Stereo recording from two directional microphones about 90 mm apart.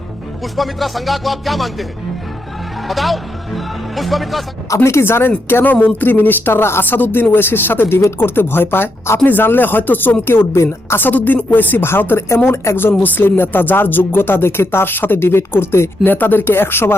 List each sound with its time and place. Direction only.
0.5 s speech: centre (ahead or behind)
4.7 s speech: 30° left (ahead or behind)